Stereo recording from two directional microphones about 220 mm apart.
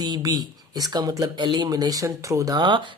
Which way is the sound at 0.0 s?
20° right (ahead or behind).